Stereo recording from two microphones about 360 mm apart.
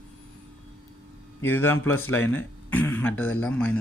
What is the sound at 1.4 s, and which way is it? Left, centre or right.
A man's voice, centre.